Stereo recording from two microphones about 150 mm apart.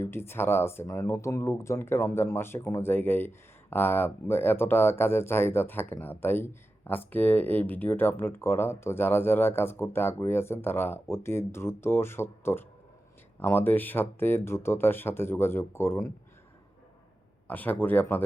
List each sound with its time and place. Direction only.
0.0 s speech: 15° left (ahead or behind)
17.5 s speech: 10° left (ahead or behind)